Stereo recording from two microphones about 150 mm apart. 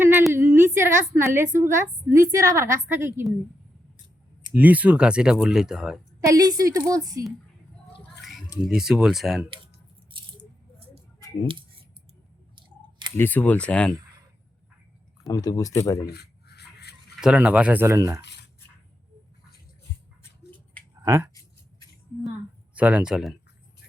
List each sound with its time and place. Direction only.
0.0 s a sound: 15° right (ahead or behind)
0.3 s a woman's voice: 15° right (ahead or behind)
4.5 s speech: 10° right (ahead or behind)
6.2 s a woman's voice: 25° right (ahead or behind)
8.6 s speech: 5° right (ahead or behind)
10.1 s squish: 35° right (ahead or behind)
12.5 s clicking: 30° right (ahead or behind)
13.1 s speech: 10° left (ahead or behind)
15.3 s speech: 25° left (ahead or behind)
16.0 s rub: 90° left
17.2 s a woman's voice: 5° right (ahead or behind)
21.0 s speech: 15° right (ahead or behind)
22.7 s speech: 10° right (ahead or behind)